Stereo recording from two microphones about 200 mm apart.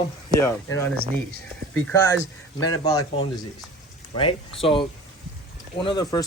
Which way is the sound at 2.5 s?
20° left (ahead or behind).